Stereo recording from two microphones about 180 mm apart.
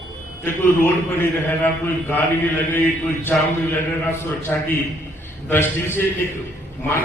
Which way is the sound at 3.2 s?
15° left (ahead or behind).